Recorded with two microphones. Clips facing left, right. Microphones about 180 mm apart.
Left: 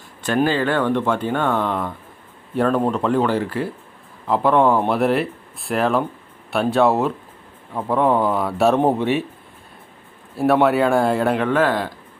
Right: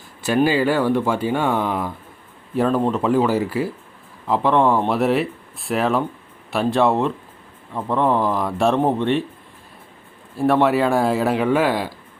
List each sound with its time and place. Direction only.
0.2 s speech: 10° right (ahead or behind); by 9.2 s 5° left (ahead or behind)
10.3 s speech: centre (ahead or behind)